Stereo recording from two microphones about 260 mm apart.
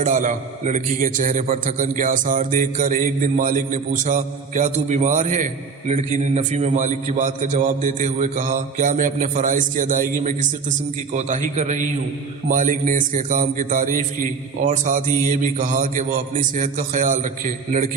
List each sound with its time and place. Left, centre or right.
0.0 s a man's voice: right